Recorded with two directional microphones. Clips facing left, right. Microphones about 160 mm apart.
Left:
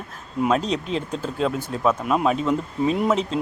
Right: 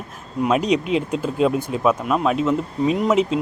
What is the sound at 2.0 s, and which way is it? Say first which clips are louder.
Speech: right 1 dB; centre (ahead or behind).